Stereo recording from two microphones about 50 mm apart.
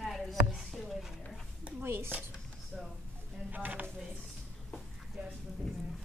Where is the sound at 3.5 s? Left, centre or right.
Right.